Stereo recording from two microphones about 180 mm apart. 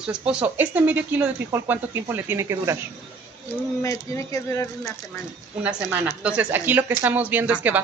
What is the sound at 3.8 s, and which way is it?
Speech, 15° left (ahead or behind).